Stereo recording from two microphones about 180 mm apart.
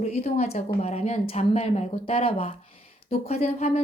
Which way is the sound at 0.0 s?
35° left (ahead or behind).